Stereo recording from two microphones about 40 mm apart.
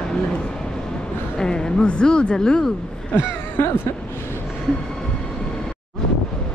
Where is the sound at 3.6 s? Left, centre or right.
Left.